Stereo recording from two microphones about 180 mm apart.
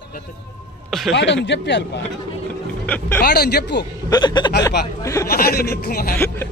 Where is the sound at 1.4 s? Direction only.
75° left (ahead or behind).